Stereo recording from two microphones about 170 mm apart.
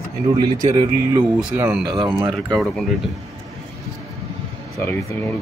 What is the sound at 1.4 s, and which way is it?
Speech, 10° right (ahead or behind).